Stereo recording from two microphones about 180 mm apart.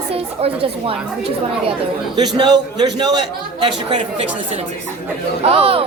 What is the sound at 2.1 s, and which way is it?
Speech, 25° right (ahead or behind).